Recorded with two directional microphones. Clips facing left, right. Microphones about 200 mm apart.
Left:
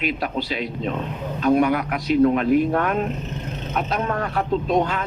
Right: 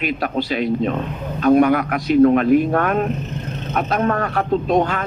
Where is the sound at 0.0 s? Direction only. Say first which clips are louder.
Right 3 dB; 50° right (ahead or behind).